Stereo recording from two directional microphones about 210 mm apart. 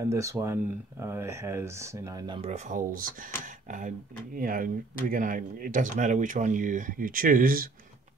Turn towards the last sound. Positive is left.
turn(degrees=-40)  # may be behind; listen again after turning